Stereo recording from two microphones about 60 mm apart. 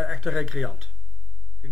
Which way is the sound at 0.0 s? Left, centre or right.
Centre.